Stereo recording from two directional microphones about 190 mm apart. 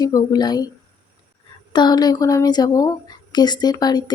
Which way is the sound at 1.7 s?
20° left (ahead or behind).